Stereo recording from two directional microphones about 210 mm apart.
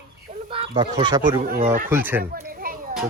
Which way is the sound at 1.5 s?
40° right (ahead or behind).